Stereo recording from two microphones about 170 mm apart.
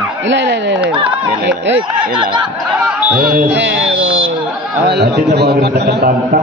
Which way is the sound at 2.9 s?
5° right (ahead or behind).